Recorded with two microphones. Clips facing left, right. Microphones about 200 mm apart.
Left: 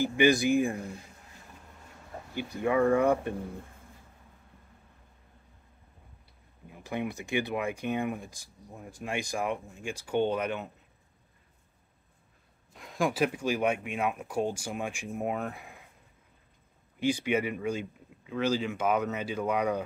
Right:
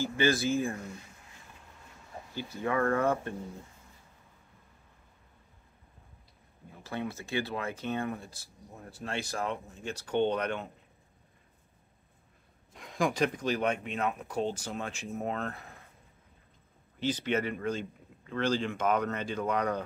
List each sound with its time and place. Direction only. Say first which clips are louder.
0.0 s speech: left 4 dB; 15° left (ahead or behind)
2.3 s speech: left 4 dB; 15° left (ahead or behind)
6.8 s speech: left 3 dB; 15° left (ahead or behind)
12.7 s speech: left 1 dB; centre (ahead or behind)
17.0 s speech: left 2 dB; 10° left (ahead or behind)